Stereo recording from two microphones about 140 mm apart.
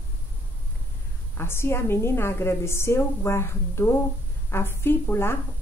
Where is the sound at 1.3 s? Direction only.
15° left (ahead or behind).